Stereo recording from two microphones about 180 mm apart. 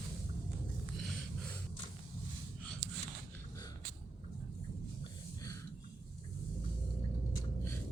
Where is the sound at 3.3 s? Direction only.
20° left (ahead or behind).